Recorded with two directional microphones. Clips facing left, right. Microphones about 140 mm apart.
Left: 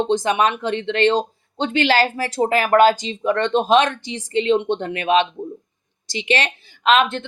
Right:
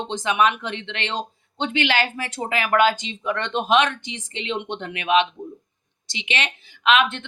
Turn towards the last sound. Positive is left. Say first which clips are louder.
# left 3 dB
turn(degrees=35)  # may be behind; listen again after turning